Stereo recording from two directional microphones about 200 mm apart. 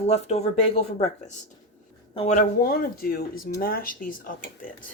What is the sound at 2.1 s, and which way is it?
Speech, 35° left (ahead or behind).